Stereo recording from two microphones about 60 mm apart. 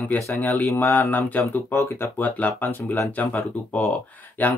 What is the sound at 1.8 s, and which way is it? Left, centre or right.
Speech, left.